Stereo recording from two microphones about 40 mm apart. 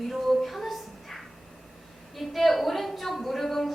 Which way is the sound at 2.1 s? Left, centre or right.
Centre.